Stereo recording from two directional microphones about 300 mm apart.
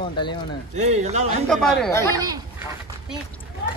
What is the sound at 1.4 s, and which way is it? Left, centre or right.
Speech, centre.